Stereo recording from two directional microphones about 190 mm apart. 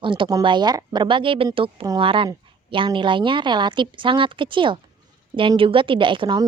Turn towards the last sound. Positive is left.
turn(degrees=-25)  # may be behind; listen again after turning